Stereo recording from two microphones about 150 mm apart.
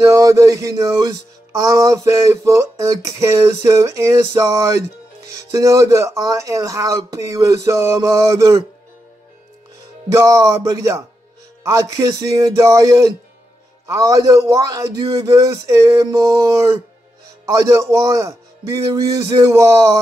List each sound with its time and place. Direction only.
0.1 s music: 20° right (ahead or behind)
10.1 s music: 20° right (ahead or behind)